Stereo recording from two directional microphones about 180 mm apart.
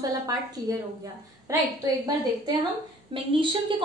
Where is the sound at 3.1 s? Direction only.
30° right (ahead or behind).